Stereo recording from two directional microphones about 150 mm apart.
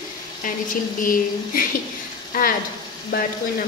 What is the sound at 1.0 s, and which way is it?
Speech, 65° left (ahead or behind).